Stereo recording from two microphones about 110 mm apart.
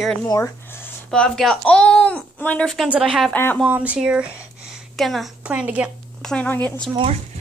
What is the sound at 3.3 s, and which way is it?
Speech, 20° left (ahead or behind).